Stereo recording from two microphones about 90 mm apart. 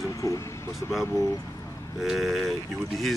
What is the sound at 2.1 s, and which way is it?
Speech, centre (ahead or behind).